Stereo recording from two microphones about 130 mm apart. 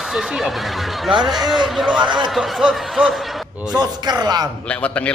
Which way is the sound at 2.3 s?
Centre (ahead or behind).